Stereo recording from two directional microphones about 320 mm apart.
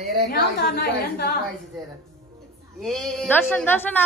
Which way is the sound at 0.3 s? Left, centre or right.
Left.